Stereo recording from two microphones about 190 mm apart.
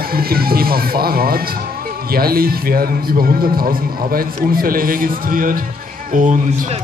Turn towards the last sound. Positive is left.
turn(degrees=-40)  # may be behind; listen again after turning